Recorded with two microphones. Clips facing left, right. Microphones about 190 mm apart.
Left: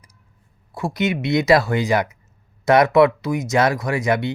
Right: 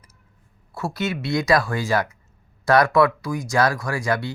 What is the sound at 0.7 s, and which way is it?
Speech, 15° left (ahead or behind).